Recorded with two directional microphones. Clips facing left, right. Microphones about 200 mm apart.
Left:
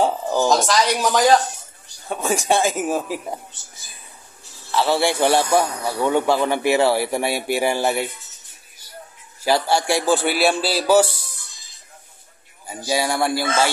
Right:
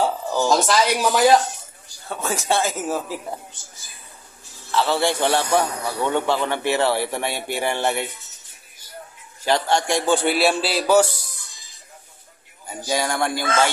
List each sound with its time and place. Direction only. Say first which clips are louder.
0.0 s a sound: left 2 dB; 15° left (ahead or behind)
0.5 s a man's voice: right 1 dB; 5° right (ahead or behind)
2.0 s a man's voice: left 3 dB; 15° left (ahead or behind)
4.6 s a man's voice: left 1 dB; 10° left (ahead or behind)
9.4 s a man's voice: left 1 dB; 5° left (ahead or behind)
12.6 s a man's voice: left 2 dB; 10° left (ahead or behind)